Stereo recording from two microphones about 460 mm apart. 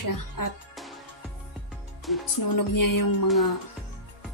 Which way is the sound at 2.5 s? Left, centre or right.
Left.